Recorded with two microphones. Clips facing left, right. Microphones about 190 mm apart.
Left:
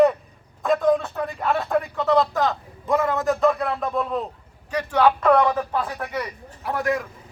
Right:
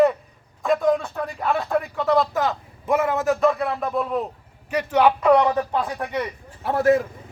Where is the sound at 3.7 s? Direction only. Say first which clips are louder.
Right 1 dB; 5° right (ahead or behind).